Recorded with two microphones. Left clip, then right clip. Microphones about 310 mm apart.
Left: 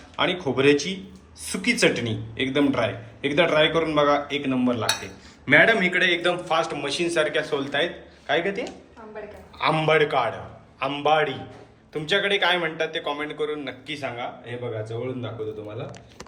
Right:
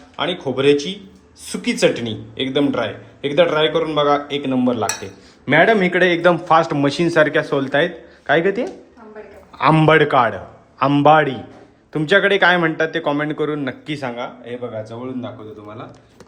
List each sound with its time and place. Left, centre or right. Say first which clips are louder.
0.4 s a man's voice: right 5 dB; centre; by 14.5 s right